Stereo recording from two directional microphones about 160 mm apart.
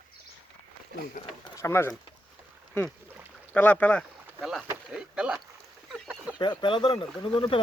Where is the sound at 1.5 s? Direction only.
15° left (ahead or behind).